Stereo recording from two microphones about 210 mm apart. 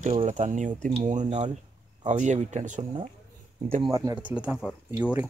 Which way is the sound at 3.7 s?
20° right (ahead or behind).